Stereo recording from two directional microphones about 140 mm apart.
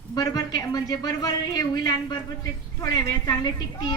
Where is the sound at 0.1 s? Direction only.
25° left (ahead or behind).